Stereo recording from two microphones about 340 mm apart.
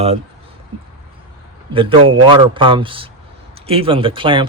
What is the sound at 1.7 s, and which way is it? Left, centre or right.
Speech, centre.